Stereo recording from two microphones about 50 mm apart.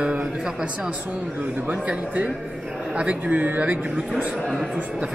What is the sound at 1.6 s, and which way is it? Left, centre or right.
Speech, right.